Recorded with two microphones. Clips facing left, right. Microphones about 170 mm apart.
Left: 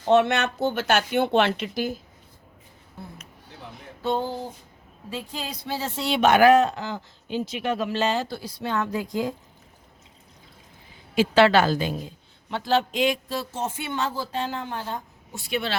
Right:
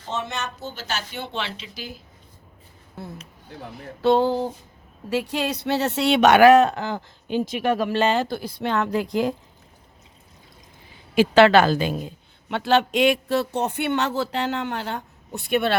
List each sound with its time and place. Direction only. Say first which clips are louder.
0.0 s speech: left 10 dB; 65° left (ahead or behind); by 2.0 s 50° left (ahead or behind)
3.0 s a woman's voice: right 5 dB; 90° right; by 9.3 s 70° right (ahead or behind)
11.1 s a woman's voice: right 3 dB; 65° right (ahead or behind)